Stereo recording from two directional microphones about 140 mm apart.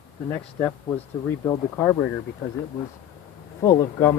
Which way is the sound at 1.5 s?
15° left (ahead or behind).